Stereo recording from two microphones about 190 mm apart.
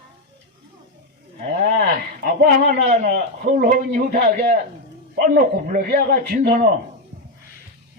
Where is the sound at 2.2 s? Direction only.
55° right (ahead or behind).